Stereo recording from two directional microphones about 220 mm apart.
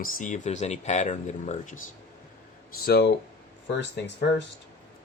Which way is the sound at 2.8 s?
45° left (ahead or behind).